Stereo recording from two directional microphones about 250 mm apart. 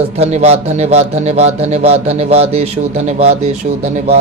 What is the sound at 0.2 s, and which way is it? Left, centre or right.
A man's voice, right.